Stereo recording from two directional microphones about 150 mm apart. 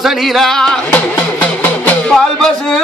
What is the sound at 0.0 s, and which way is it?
Music, centre (ahead or behind).